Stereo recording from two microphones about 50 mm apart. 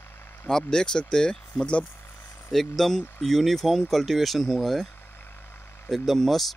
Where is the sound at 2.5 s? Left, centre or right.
Centre.